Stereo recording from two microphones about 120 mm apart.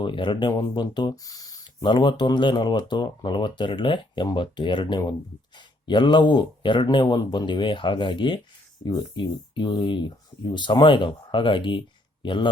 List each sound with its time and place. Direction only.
0.0 s speech: 40° left (ahead or behind)
1.8 s speech: 40° left (ahead or behind)